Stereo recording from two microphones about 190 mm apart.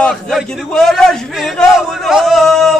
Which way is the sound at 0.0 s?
Centre (ahead or behind).